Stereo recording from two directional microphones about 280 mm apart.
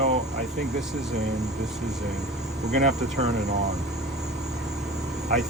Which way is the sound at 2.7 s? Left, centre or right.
Right.